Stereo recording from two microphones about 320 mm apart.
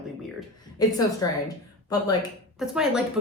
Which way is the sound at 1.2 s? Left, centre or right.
Centre.